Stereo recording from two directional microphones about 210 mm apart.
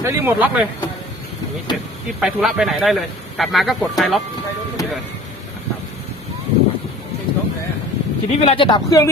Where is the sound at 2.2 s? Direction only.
Centre (ahead or behind).